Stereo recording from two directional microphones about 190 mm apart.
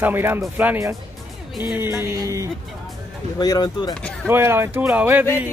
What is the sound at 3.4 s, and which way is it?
Speech, 20° left (ahead or behind).